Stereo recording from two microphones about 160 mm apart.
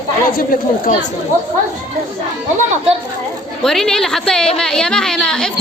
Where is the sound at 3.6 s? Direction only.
5° left (ahead or behind).